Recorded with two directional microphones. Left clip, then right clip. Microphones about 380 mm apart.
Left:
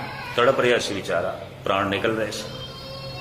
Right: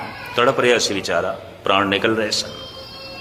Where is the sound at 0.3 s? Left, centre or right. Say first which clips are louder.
Right 3 dB; centre.